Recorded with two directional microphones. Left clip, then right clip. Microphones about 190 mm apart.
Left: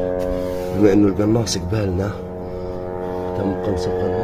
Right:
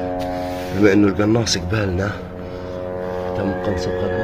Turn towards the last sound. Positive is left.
turn(degrees=15)  # may be behind; listen again after turning